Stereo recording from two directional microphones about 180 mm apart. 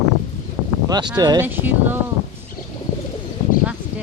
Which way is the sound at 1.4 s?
10° right (ahead or behind).